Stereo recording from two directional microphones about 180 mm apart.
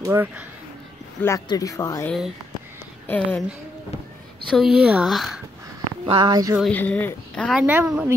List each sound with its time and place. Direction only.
0.0 s speech: 15° right (ahead or behind)
1.2 s speech: 15° left (ahead or behind)
2.0 s speech: centre (ahead or behind)
4.5 s speech: centre (ahead or behind)
6.0 s speech: 25° right (ahead or behind)
6.6 s speech: 5° left (ahead or behind)
7.6 s speech: 10° right (ahead or behind)